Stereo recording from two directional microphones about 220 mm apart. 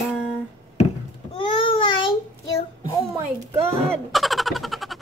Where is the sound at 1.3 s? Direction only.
25° left (ahead or behind).